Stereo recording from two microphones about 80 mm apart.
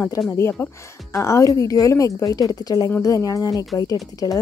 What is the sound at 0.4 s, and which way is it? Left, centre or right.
A woman's voice, left.